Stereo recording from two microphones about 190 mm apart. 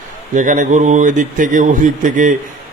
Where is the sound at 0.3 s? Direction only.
40° right (ahead or behind).